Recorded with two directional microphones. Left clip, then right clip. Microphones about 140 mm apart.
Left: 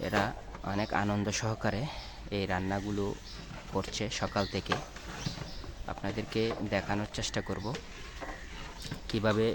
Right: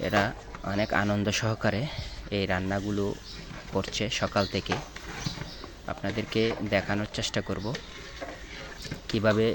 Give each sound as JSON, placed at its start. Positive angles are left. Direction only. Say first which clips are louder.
{"t": 0.0, "sound": "speech", "louder": "right 5 dB", "side_deg": -10}
{"t": 5.8, "sound": "speech", "louder": "right 4 dB", "side_deg": -10}
{"t": 9.0, "sound": "speech", "louder": "right 5 dB", "side_deg": -5}